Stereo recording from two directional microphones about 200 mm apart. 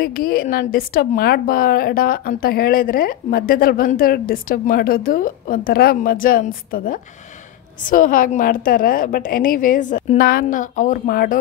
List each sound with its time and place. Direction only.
0.0 s a woman's voice: 45° left (ahead or behind)